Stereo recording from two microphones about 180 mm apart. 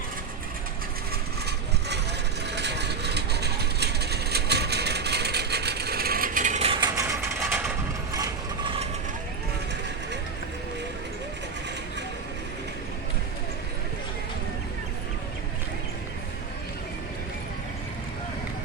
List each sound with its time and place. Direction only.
2.5 s vehicle: 70° right (ahead or behind); by 7.7 s 10° right (ahead or behind)